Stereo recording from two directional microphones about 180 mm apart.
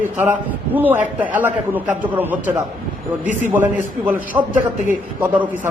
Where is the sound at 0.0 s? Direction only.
10° right (ahead or behind).